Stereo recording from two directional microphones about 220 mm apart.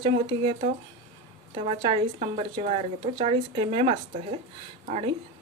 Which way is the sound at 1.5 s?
25° right (ahead or behind).